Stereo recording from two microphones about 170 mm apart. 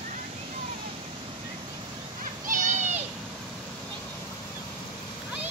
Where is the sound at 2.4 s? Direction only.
50° right (ahead or behind).